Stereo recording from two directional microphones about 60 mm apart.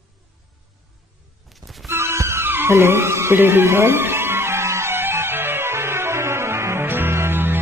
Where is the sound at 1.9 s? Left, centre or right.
Right.